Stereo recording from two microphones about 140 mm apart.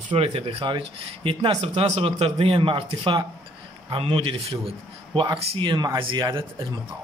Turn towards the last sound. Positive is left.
turn(degrees=-30)  # may be behind; listen again after turning